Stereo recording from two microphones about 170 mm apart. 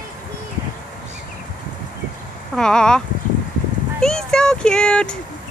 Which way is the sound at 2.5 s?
5° left (ahead or behind).